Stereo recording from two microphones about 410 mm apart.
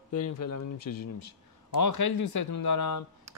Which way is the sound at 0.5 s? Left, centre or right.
Left.